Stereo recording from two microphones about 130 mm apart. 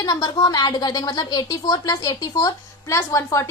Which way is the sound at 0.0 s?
30° left (ahead or behind).